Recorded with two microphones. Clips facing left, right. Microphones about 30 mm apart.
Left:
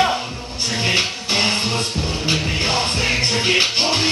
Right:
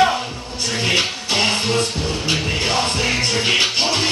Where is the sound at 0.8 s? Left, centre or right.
Centre.